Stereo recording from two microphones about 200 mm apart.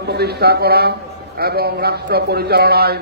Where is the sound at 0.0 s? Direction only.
55° right (ahead or behind).